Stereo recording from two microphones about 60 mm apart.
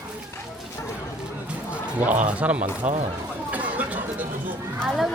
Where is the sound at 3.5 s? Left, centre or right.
Right.